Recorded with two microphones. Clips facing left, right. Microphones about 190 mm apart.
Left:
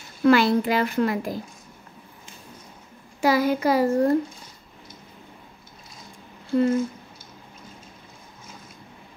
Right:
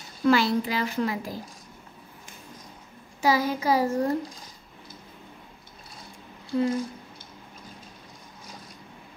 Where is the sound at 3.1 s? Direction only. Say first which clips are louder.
Left 3 dB; 60° left (ahead or behind).